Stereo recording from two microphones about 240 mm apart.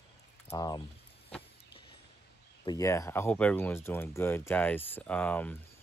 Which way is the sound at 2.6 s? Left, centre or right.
Centre.